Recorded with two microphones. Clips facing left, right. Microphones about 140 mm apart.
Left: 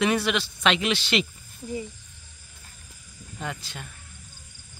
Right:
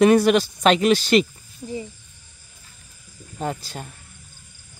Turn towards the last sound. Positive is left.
turn(degrees=-40)  # may be behind; listen again after turning